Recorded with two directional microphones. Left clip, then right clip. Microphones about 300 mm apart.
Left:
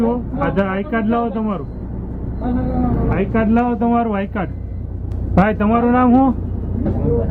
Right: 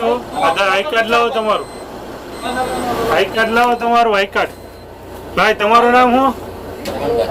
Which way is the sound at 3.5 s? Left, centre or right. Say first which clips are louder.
Right 6 dB; centre.